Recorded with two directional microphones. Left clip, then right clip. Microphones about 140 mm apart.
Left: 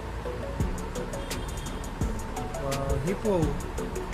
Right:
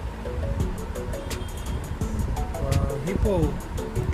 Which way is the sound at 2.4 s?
Centre (ahead or behind).